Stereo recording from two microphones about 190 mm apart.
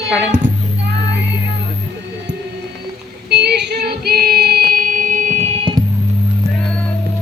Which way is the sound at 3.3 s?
60° right (ahead or behind).